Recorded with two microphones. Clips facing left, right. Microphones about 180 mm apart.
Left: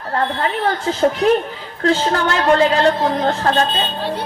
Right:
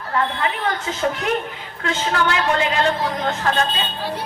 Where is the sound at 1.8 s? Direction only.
40° left (ahead or behind).